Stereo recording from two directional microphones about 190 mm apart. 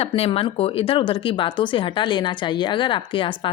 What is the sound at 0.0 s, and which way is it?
Speech, 30° left (ahead or behind).